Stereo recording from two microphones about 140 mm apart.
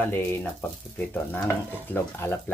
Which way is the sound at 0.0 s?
15° left (ahead or behind).